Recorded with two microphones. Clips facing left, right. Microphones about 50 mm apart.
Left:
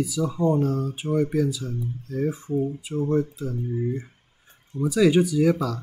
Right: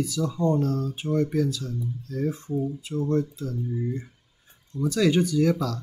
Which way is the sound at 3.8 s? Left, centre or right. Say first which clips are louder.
Left 3 dB; centre.